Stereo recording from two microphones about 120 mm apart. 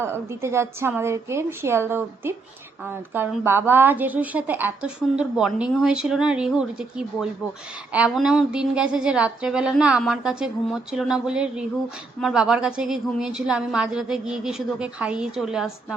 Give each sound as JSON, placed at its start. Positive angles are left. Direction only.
{"t": 0.0, "sound": "a woman's voice", "side_deg": -20}